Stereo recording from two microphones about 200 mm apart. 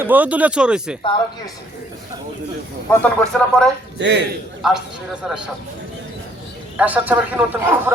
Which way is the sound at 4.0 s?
60° right (ahead or behind).